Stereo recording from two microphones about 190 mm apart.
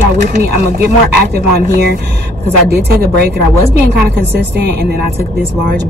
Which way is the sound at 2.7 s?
55° right (ahead or behind).